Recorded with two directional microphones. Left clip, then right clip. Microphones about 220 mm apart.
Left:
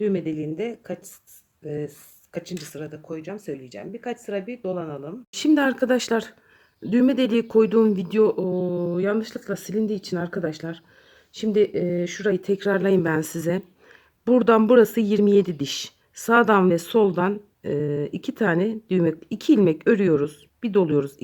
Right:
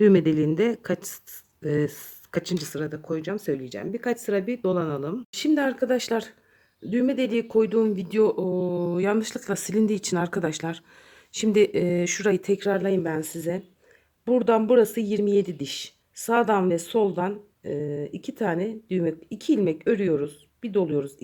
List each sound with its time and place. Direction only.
0.0 s speech: 30° right (ahead or behind)
5.3 s speech: 10° left (ahead or behind)
12.8 s speech: 15° left (ahead or behind)